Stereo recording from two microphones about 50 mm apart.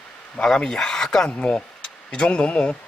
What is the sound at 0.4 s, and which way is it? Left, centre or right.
Speech, centre.